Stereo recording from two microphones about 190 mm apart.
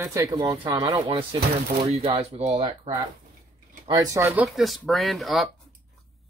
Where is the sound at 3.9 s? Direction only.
15° right (ahead or behind).